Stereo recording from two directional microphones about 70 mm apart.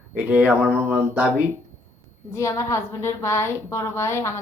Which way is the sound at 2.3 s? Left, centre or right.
Left.